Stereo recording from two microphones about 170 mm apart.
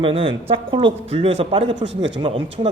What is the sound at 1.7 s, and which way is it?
Speech, 90° right.